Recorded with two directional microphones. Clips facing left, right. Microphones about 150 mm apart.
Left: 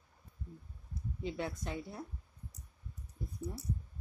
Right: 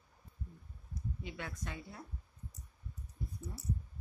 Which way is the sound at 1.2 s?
30° left (ahead or behind).